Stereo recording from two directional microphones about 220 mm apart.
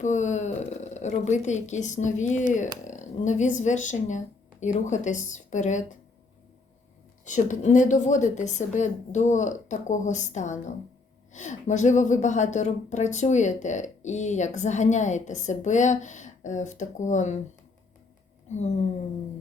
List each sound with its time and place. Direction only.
0.0 s a woman's voice: 35° left (ahead or behind)
7.3 s a woman's voice: 35° left (ahead or behind)
18.4 s speech: 30° left (ahead or behind)